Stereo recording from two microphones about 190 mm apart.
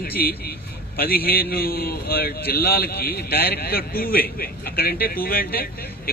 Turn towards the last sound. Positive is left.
turn(degrees=50)  # may be behind; listen again after turning